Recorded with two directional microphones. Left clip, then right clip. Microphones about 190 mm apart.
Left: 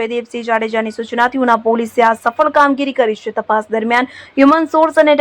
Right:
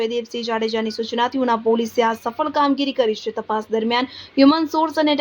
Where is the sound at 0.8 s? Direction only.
40° left (ahead or behind).